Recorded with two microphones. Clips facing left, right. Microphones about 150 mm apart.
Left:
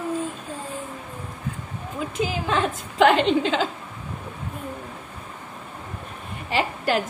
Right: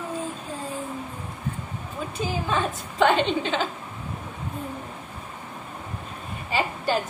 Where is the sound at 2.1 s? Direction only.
90° left.